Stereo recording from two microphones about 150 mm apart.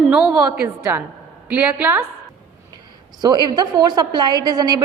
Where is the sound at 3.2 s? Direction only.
30° right (ahead or behind).